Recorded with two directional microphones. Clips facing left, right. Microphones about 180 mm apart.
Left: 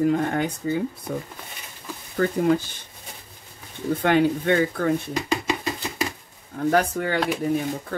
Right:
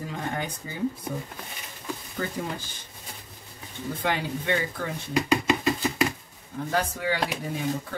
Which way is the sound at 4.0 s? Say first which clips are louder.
Left 9 dB; 55° left (ahead or behind).